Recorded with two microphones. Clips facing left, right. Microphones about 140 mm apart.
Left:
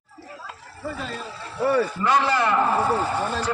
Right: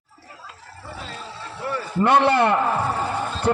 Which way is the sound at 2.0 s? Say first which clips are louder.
Right 4 dB; 60° right (ahead or behind).